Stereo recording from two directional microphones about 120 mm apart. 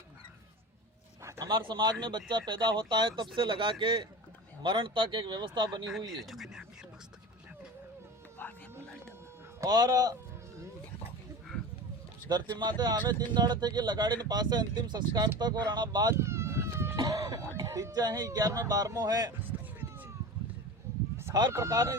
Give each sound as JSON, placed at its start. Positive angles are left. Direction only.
{"t": 1.2, "sound": "a sound", "side_deg": -25}
{"t": 1.5, "sound": "speech", "side_deg": -40}
{"t": 6.1, "sound": "speech", "side_deg": 0}
{"t": 8.4, "sound": "music", "side_deg": 15}
{"t": 9.6, "sound": "speech", "side_deg": -35}
{"t": 12.3, "sound": "speech", "side_deg": -40}
{"t": 16.1, "sound": "a sound", "side_deg": -20}
{"t": 17.0, "sound": "cough", "side_deg": -30}
{"t": 17.6, "sound": "speech", "side_deg": -30}
{"t": 19.4, "sound": "a sound", "side_deg": -15}
{"t": 21.5, "sound": "speech", "side_deg": -25}